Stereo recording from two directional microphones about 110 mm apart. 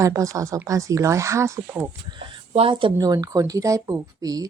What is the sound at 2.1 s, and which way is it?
Speech, 55° right (ahead or behind).